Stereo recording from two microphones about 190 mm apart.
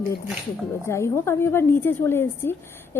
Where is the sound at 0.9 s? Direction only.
15° left (ahead or behind).